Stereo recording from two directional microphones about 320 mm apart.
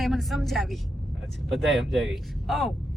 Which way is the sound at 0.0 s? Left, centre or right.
Centre.